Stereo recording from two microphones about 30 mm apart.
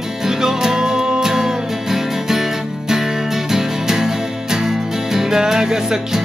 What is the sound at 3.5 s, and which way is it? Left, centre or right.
Music, centre.